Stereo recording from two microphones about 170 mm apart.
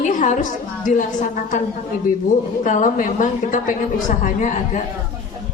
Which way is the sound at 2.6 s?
45° left (ahead or behind).